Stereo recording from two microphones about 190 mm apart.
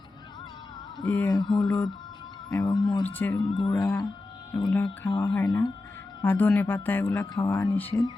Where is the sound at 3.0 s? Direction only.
10° left (ahead or behind).